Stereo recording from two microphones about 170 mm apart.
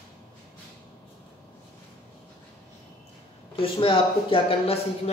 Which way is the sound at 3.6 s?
30° left (ahead or behind).